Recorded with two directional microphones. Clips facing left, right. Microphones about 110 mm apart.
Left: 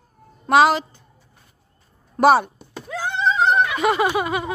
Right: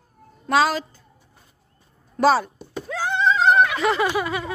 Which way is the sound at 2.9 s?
20° left (ahead or behind).